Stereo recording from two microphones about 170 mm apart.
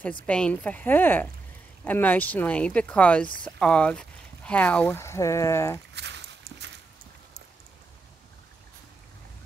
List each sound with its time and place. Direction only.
0.3 s speech: 10° left (ahead or behind)
5.9 s walk: 90° right